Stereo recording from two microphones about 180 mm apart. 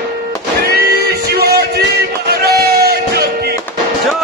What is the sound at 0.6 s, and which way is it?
Music, 60° right (ahead or behind).